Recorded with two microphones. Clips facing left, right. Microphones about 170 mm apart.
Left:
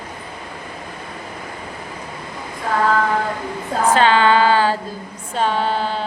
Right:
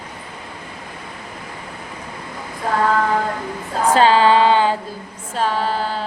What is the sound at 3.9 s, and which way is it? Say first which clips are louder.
Female singing: right 2 dB; 35° right (ahead or behind).